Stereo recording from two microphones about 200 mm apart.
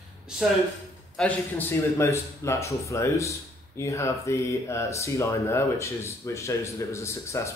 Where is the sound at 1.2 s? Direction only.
10° left (ahead or behind).